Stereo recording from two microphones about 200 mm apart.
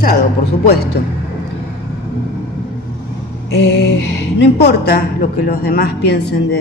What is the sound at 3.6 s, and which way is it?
Music, 55° left (ahead or behind).